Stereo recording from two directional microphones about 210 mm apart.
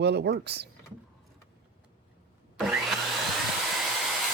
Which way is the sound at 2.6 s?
Centre (ahead or behind).